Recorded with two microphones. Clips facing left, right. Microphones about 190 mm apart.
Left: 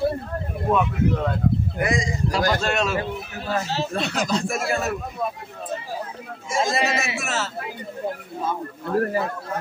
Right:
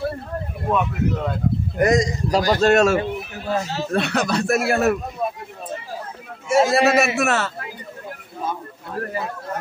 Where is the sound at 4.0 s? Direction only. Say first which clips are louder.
Right 5 dB; 65° right (ahead or behind).